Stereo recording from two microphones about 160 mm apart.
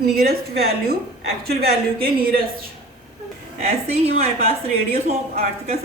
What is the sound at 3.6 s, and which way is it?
A woman's voice, 40° right (ahead or behind).